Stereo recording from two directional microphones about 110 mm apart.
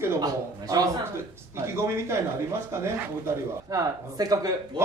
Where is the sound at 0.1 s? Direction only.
35° right (ahead or behind).